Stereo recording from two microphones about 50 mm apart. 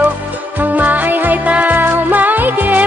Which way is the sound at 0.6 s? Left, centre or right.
Right.